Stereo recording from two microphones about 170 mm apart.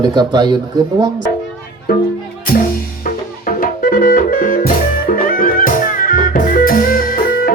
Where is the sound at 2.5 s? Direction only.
60° left (ahead or behind).